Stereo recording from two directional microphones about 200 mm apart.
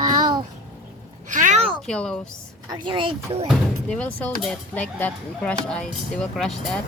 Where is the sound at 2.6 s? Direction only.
20° right (ahead or behind).